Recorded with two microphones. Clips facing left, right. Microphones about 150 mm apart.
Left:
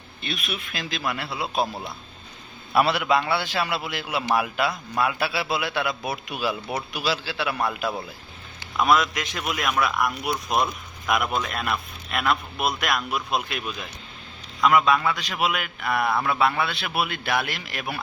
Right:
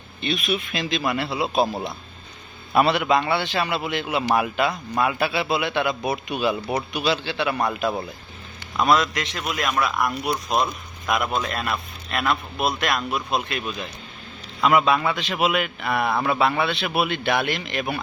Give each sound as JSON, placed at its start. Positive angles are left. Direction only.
{"t": 0.2, "sound": "a man's voice", "side_deg": 0}
{"t": 2.7, "sound": "a man's voice", "side_deg": 0}